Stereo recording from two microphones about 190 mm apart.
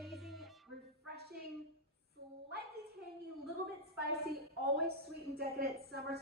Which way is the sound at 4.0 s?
55° right (ahead or behind).